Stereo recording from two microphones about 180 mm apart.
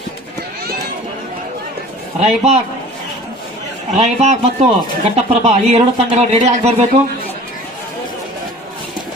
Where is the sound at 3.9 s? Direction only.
35° right (ahead or behind).